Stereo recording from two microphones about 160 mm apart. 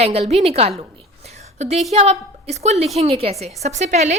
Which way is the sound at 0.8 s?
40° right (ahead or behind).